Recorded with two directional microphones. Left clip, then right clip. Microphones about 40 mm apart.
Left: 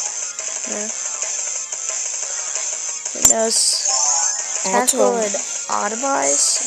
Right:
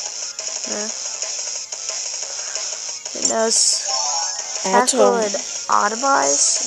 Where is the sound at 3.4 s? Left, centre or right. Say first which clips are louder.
Even; left.